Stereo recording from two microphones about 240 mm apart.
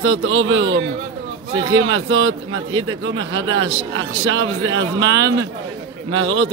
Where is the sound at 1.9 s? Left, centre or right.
Right.